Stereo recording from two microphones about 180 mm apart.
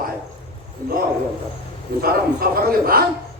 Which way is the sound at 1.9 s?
60° right (ahead or behind).